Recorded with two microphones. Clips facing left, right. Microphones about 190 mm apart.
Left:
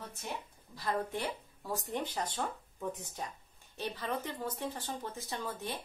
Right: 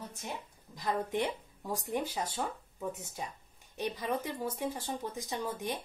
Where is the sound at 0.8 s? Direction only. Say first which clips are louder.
Right 3 dB; 15° right (ahead or behind).